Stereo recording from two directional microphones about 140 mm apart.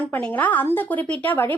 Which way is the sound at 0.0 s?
10° left (ahead or behind).